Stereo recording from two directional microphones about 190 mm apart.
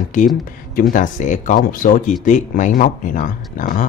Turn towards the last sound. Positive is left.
turn(degrees=45)  # may be behind; listen again after turning